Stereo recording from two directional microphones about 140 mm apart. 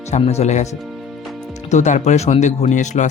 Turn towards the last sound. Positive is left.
turn(degrees=60)  # may be behind; listen again after turning